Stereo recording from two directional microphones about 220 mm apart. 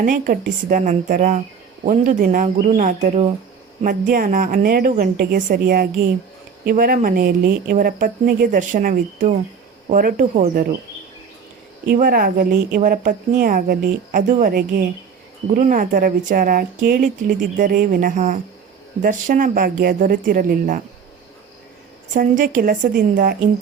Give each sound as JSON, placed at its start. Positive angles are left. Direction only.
{"t": 0.0, "sound": "speech", "side_deg": -35}
{"t": 11.9, "sound": "speech", "side_deg": -40}
{"t": 22.1, "sound": "speech", "side_deg": -35}